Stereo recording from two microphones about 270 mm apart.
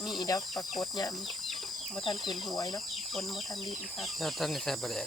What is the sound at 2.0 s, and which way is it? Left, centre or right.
Speech, centre.